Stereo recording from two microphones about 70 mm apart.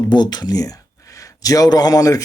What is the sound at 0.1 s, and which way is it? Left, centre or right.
Speech, left.